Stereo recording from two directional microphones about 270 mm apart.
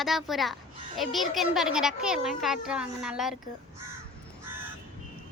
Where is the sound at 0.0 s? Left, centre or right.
Centre.